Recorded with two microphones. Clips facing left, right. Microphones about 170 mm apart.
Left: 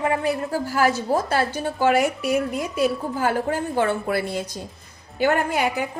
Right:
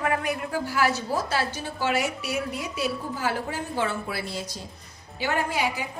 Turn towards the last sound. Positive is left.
turn(degrees=55)  # may be behind; listen again after turning